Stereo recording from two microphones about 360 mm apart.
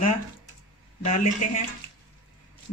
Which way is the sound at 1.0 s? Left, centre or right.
Centre.